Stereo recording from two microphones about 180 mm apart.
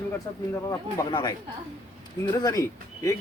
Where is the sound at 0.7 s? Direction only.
20° left (ahead or behind).